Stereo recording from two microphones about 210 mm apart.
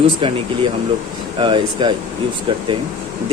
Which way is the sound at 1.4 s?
20° right (ahead or behind).